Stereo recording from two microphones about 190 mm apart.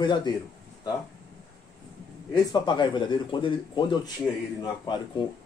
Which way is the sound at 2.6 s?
25° left (ahead or behind).